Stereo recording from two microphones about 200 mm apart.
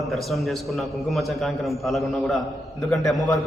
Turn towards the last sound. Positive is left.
turn(degrees=0)  # may be behind; listen again after turning